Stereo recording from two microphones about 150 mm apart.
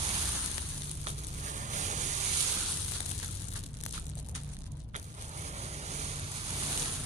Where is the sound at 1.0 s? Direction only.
55° right (ahead or behind).